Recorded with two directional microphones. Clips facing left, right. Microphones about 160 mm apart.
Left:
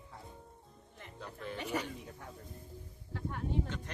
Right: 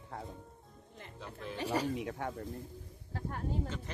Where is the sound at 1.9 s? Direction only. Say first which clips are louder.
Right 10 dB; 85° right.